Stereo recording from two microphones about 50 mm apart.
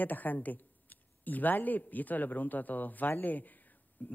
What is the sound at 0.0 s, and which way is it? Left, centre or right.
Speech, left.